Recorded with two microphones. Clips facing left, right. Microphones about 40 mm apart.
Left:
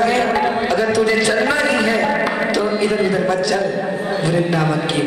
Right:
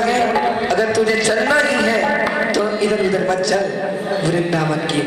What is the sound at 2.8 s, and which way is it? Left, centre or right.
Speech, centre.